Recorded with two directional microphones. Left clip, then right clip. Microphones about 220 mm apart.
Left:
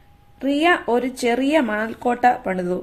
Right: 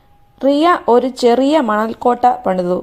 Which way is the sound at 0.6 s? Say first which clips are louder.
Right 5 dB; 20° right (ahead or behind).